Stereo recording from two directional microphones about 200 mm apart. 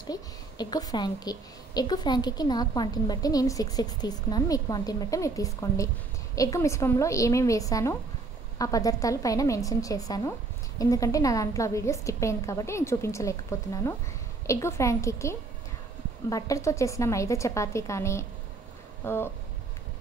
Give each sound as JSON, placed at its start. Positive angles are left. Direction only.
{"t": 0.0, "sound": "a woman's voice", "side_deg": 20}